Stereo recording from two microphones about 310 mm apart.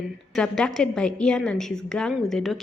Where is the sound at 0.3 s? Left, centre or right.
Centre.